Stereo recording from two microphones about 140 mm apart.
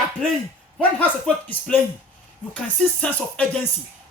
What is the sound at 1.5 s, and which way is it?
Speech, 10° left (ahead or behind).